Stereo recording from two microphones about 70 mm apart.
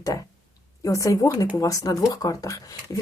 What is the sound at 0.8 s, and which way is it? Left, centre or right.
Speech, left.